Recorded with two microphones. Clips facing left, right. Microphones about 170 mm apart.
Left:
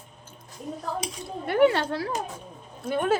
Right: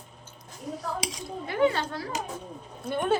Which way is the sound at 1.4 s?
65° left (ahead or behind).